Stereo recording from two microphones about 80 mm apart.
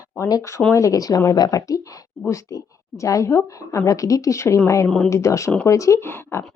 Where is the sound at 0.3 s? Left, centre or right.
Left.